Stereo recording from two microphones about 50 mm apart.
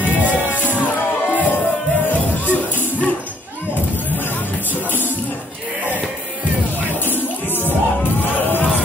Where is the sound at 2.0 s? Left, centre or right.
Left.